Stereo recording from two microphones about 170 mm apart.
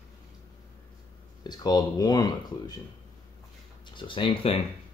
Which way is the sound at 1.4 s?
25° left (ahead or behind).